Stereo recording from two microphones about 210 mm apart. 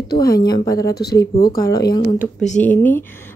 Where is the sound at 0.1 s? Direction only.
45° left (ahead or behind).